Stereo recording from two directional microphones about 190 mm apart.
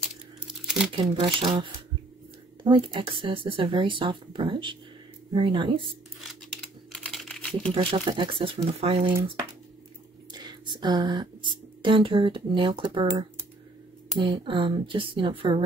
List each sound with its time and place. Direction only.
0.5 s crumpling: 5° right (ahead or behind)
1.2 s speech: 25° right (ahead or behind)
6.9 s crumpling: centre (ahead or behind)
7.7 s speech: 30° right (ahead or behind)
10.3 s speech: 20° right (ahead or behind)